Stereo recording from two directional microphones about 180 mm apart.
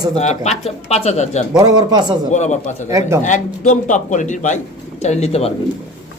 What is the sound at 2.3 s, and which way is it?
Speech, 40° left (ahead or behind).